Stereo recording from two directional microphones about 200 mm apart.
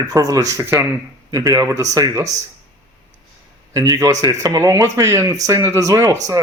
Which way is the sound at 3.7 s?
15° right (ahead or behind).